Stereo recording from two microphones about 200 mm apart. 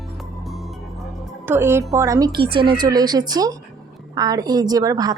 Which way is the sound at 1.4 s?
10° right (ahead or behind).